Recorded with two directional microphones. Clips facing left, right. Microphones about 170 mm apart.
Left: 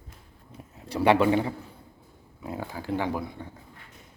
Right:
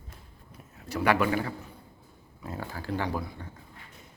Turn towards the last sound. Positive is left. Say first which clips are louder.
# left 3 dB
turn(degrees=15)  # may be behind; listen again after turning